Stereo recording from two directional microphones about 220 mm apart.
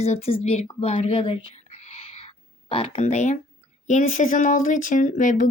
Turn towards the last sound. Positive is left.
turn(degrees=35)  # may be behind; listen again after turning